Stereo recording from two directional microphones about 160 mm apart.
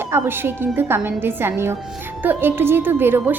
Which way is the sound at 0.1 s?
15° right (ahead or behind).